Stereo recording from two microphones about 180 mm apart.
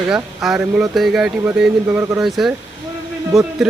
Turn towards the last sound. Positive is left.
turn(degrees=0)  # may be behind; listen again after turning